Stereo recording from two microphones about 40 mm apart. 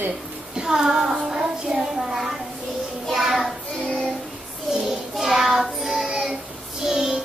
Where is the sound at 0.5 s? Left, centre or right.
Centre.